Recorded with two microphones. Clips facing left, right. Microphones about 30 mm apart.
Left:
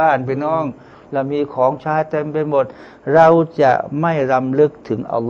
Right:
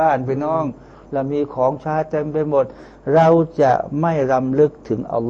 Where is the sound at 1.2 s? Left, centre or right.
Left.